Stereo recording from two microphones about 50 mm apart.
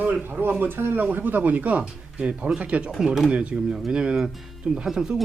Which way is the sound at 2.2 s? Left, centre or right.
Centre.